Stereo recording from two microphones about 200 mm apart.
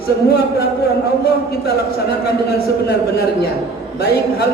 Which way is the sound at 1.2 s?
50° left (ahead or behind).